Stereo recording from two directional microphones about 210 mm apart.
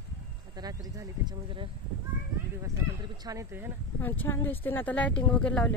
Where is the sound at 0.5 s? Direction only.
15° right (ahead or behind).